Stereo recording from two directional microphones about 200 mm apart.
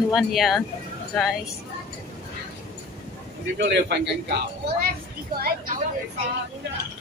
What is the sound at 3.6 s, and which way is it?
Speech, 60° right (ahead or behind).